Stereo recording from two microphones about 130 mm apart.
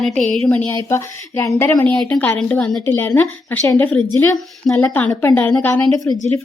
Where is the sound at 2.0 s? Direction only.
5° left (ahead or behind).